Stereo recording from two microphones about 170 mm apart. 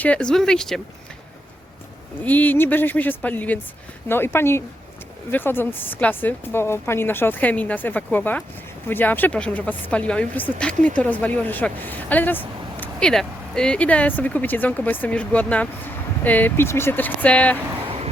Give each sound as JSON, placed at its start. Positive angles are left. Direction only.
{"t": 0.0, "sound": "speech", "side_deg": 5}
{"t": 2.2, "sound": "speech", "side_deg": 10}
{"t": 17.8, "sound": "vehicle", "side_deg": -35}